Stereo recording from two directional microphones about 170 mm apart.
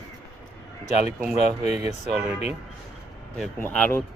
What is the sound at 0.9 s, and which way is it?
Speech, 40° left (ahead or behind).